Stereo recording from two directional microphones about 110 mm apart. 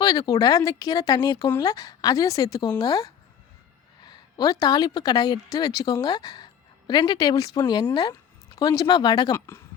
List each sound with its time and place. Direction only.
0.0 s a woman's voice: 35° left (ahead or behind)